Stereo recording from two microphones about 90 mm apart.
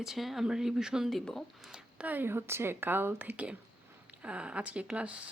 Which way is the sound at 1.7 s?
15° right (ahead or behind).